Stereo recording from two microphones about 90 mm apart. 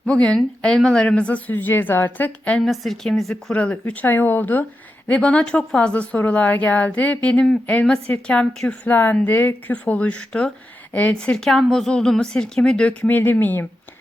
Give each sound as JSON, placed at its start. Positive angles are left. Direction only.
{"t": 0.0, "sound": "a woman's voice", "side_deg": 10}
{"t": 2.6, "sound": "speech", "side_deg": 0}
{"t": 3.5, "sound": "a woman's voice", "side_deg": 15}